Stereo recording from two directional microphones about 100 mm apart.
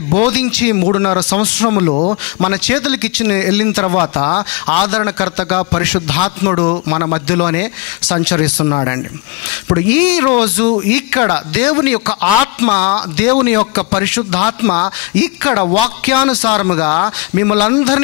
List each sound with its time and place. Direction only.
0.1 s a man's voice: 15° left (ahead or behind)
2.5 s a man's voice: 15° left (ahead or behind)
8.6 s speech: 30° left (ahead or behind)